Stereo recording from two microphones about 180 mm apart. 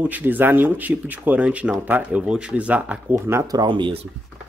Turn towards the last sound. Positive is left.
turn(degrees=-25)  # may be behind; listen again after turning